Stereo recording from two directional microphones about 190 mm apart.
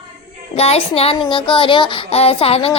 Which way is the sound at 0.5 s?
30° left (ahead or behind).